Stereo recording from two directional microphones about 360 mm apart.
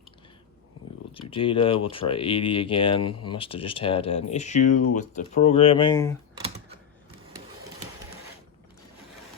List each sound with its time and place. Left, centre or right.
1.1 s speech: centre
3.0 s speech: left
3.3 s speech: centre